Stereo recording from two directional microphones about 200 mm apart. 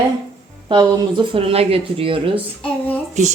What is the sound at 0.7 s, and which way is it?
Speech, 25° right (ahead or behind).